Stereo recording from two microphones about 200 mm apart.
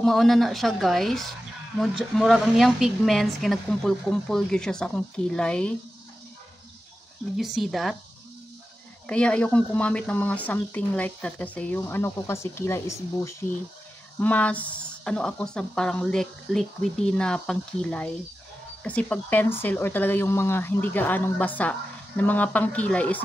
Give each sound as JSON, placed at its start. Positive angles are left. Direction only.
{"t": 0.0, "sound": "a woman's voice", "side_deg": 0}
{"t": 7.3, "sound": "a woman's voice", "side_deg": 0}
{"t": 9.0, "sound": "a woman's voice", "side_deg": 5}